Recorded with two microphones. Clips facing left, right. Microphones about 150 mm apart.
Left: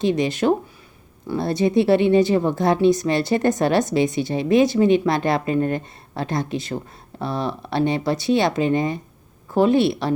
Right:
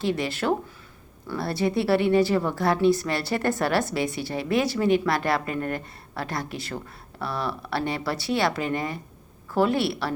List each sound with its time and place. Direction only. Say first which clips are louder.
0.0 s speech: left 6 dB; 20° left (ahead or behind)